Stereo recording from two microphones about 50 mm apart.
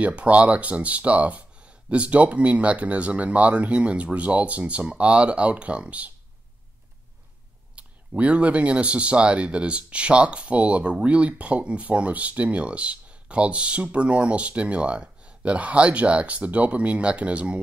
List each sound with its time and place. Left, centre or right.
0.0 s speech: right
7.7 s speech: right